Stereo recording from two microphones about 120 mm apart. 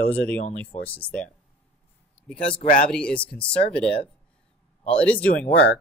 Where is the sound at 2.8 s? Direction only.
5° left (ahead or behind).